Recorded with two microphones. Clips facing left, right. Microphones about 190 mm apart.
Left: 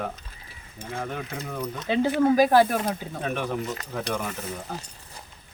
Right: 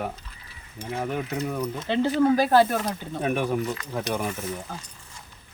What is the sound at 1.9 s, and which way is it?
Speech, 10° left (ahead or behind).